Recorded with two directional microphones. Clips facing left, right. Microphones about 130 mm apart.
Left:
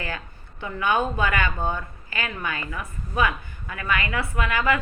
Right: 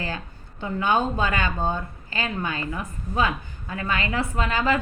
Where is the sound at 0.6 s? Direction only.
20° right (ahead or behind).